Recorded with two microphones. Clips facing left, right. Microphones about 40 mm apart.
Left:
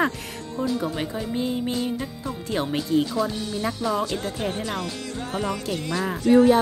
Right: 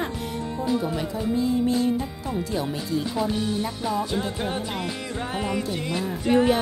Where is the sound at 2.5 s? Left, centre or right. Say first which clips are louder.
Left 7 dB; left.